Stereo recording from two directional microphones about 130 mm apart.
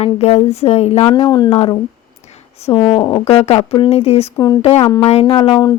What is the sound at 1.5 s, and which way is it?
A woman's voice, 45° left (ahead or behind).